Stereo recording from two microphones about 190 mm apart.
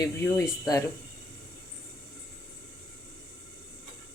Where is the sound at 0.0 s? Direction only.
15° left (ahead or behind).